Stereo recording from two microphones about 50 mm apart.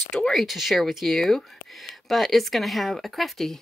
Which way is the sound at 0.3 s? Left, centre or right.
Centre.